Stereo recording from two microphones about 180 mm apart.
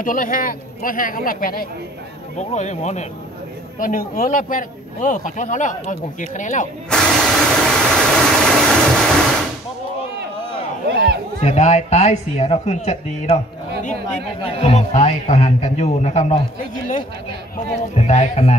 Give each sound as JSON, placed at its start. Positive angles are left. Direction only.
{"t": 0.0, "sound": "a man's voice", "side_deg": 50}
{"t": 2.3, "sound": "a man's voice", "side_deg": 40}
{"t": 3.8, "sound": "a man's voice", "side_deg": 50}
{"t": 6.9, "sound": "vehicle", "side_deg": 5}
{"t": 10.9, "sound": "a sound", "side_deg": -60}
{"t": 11.4, "sound": "a man's voice", "side_deg": 40}
{"t": 17.9, "sound": "a man's voice", "side_deg": 40}